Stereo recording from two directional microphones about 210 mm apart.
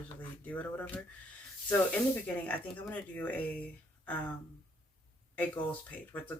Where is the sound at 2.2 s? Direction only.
5° left (ahead or behind).